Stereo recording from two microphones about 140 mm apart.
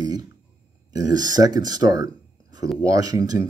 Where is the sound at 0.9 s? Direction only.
25° right (ahead or behind).